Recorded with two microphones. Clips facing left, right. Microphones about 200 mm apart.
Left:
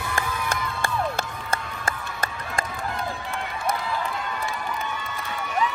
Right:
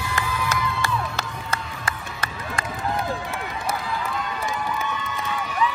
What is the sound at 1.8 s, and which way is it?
Run, 45° left (ahead or behind).